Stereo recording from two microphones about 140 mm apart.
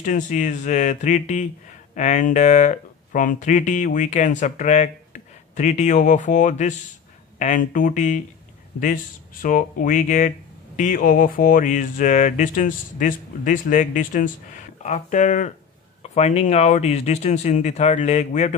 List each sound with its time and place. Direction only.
0.0 s speech: 65° left (ahead or behind)
10.8 s speech: 75° left (ahead or behind)
16.0 s speech: 50° left (ahead or behind)